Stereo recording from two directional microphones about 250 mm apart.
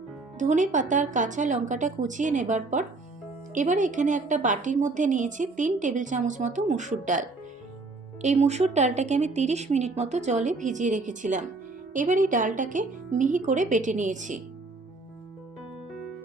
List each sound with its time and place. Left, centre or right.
0.3 s a woman's voice: right